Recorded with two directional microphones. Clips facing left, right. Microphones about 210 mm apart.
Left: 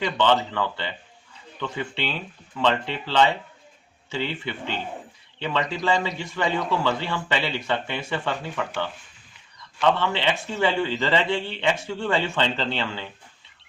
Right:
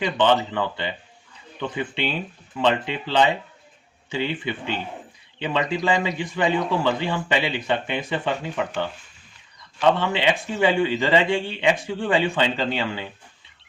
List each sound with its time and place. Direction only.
0.5 s a man's voice: 15° right (ahead or behind)